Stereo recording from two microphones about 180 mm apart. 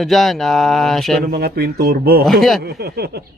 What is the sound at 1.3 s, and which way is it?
Speech, 60° right (ahead or behind).